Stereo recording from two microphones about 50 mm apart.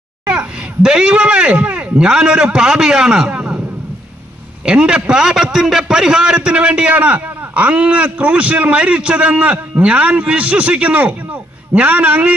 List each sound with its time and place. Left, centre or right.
0.3 s speech: centre
4.6 s a man's voice: centre